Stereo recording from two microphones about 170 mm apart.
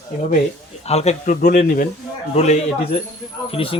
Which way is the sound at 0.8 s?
40° left (ahead or behind).